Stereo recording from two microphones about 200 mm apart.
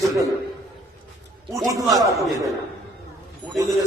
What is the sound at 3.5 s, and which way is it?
Speech, 15° right (ahead or behind).